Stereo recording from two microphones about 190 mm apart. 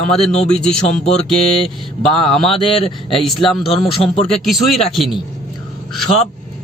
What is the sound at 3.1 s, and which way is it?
Mantra, centre (ahead or behind).